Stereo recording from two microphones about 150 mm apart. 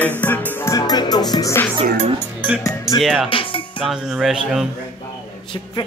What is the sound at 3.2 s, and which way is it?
Music, 35° left (ahead or behind).